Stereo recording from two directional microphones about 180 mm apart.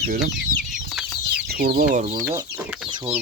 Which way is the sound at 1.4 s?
60° right (ahead or behind).